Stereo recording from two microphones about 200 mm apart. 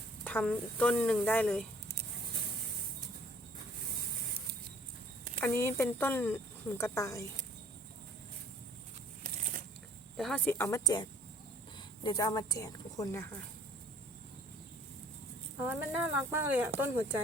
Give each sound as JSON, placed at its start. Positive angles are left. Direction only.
{"t": 0.3, "sound": "speech", "side_deg": 5}
{"t": 5.4, "sound": "speech", "side_deg": 10}
{"t": 9.2, "sound": "a sound", "side_deg": -40}
{"t": 10.2, "sound": "speech", "side_deg": 5}
{"t": 15.6, "sound": "speech", "side_deg": -10}